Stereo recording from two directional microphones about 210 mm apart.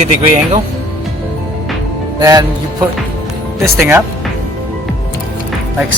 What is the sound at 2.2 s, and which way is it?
Speech, 20° right (ahead or behind).